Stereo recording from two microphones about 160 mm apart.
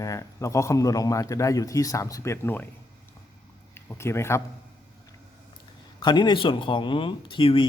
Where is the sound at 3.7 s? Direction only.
15° left (ahead or behind).